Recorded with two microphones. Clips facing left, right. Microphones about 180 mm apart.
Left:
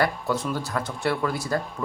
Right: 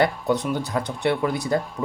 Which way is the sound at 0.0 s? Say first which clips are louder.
Right 3 dB; 20° right (ahead or behind).